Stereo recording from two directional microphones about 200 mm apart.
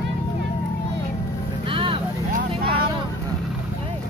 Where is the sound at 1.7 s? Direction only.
25° right (ahead or behind).